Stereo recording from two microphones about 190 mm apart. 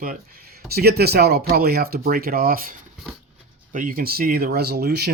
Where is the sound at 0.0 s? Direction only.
50° right (ahead or behind).